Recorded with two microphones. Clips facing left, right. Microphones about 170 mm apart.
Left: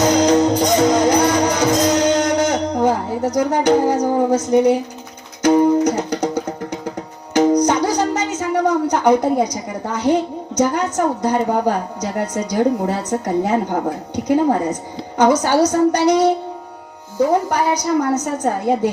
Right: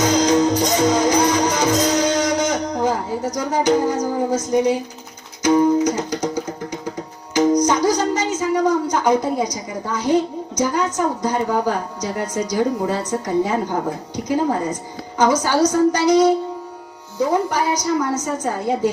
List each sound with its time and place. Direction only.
0.0 s music: 60° left (ahead or behind)
15.2 s music: 60° left (ahead or behind)
17.5 s music: 60° left (ahead or behind)